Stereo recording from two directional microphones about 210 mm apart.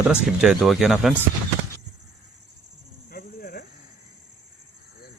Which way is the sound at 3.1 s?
45° left (ahead or behind).